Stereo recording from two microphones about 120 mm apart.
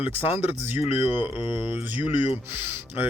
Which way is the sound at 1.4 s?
40° left (ahead or behind).